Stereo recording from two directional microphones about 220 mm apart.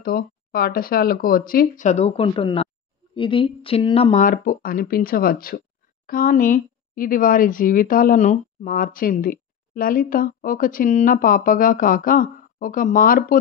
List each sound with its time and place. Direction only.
0.0 s speech: 40° left (ahead or behind)